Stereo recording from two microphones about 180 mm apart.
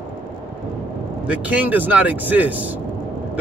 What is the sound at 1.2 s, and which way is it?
Speech, 5° right (ahead or behind).